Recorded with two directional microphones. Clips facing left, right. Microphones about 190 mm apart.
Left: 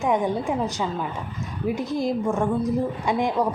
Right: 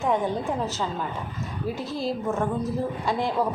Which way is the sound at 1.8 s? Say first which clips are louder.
Left 5 dB; 15° left (ahead or behind).